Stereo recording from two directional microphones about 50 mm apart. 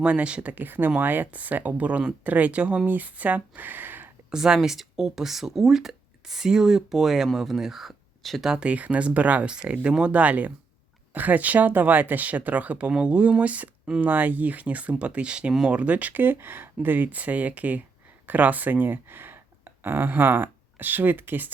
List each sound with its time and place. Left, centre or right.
0.0 s speech: right
0.5 s speech: right
2.9 s speech: right
4.3 s speech: centre
8.4 s speech: right
9.5 s speech: centre; by 21.5 s right